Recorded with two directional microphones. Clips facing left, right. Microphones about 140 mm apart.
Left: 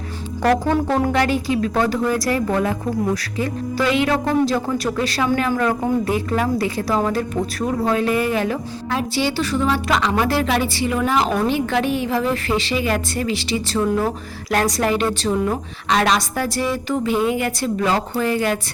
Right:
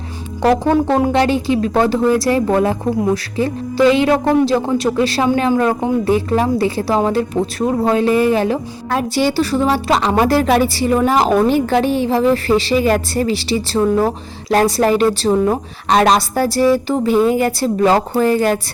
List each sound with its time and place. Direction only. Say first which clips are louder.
1.1 s a woman's voice: right 4 dB; 25° right (ahead or behind)
8.9 s a woman's voice: right 5 dB; 45° right (ahead or behind)